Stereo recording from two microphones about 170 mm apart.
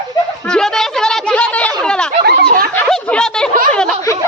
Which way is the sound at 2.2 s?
70° right (ahead or behind).